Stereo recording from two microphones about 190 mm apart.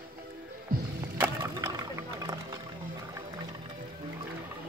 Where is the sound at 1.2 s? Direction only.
15° right (ahead or behind).